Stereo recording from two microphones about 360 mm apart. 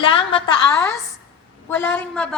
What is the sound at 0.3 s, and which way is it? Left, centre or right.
A woman's voice, centre.